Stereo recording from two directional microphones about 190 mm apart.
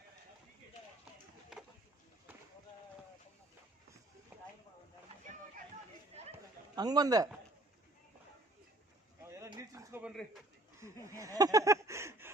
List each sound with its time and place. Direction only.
6.7 s a man's voice: 20° right (ahead or behind)
9.2 s bird: 15° right (ahead or behind)
10.8 s a sound: 15° right (ahead or behind)